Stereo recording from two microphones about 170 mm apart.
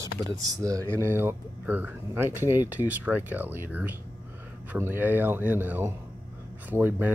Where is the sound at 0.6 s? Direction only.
20° right (ahead or behind).